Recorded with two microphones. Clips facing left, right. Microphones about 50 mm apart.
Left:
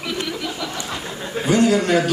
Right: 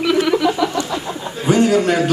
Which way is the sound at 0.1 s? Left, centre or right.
Right.